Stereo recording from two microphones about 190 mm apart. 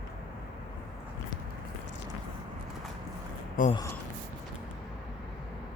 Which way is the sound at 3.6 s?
45° left (ahead or behind).